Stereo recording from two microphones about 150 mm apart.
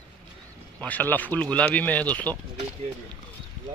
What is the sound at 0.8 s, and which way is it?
Speech, 10° left (ahead or behind).